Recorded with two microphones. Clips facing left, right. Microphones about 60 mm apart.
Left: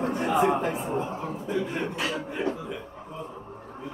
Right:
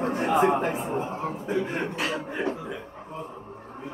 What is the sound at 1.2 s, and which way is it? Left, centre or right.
Speech, right.